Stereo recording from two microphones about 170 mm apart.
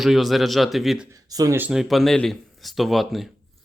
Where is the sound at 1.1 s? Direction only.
20° right (ahead or behind).